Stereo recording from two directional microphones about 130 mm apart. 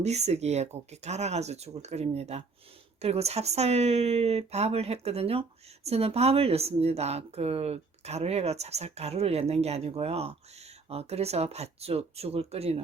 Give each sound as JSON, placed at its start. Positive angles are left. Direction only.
{"t": 0.0, "sound": "a woman's voice", "side_deg": -55}